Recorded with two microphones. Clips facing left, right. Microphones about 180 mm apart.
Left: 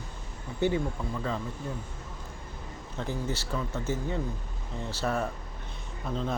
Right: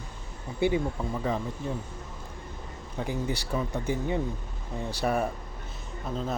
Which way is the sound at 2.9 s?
15° right (ahead or behind).